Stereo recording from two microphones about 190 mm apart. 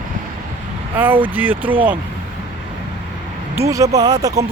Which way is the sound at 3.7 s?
15° right (ahead or behind).